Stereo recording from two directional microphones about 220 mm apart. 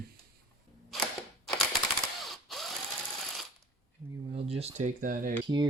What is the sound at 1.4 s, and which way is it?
Typewriter, centre (ahead or behind).